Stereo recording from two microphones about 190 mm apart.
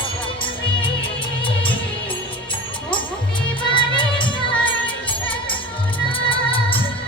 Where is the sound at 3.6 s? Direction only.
25° left (ahead or behind).